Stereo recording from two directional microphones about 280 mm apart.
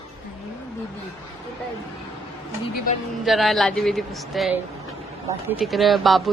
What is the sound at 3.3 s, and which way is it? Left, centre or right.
Speech, centre.